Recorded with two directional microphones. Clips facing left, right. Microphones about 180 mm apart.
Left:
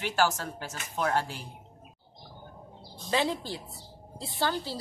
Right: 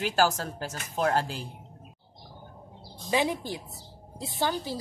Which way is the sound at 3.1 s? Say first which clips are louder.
Right 2 dB; 15° right (ahead or behind).